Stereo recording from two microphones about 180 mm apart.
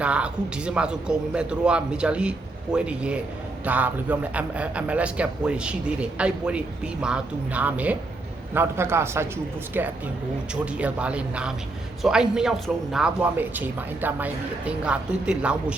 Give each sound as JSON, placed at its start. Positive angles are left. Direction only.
{"t": 0.0, "sound": "a man's voice", "side_deg": -5}